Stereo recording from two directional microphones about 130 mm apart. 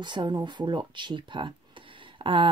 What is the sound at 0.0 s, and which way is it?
Speech, 35° right (ahead or behind).